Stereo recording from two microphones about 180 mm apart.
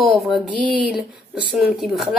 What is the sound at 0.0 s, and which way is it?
Speech, centre (ahead or behind).